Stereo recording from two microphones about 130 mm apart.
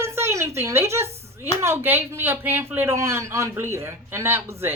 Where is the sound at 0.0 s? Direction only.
20° right (ahead or behind).